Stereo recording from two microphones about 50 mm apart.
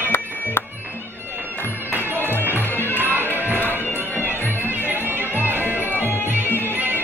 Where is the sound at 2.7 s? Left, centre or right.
Left.